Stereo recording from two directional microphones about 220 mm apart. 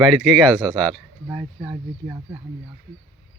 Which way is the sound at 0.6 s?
20° right (ahead or behind).